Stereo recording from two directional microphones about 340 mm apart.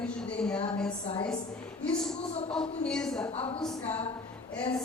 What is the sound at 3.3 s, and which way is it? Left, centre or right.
Speech, centre.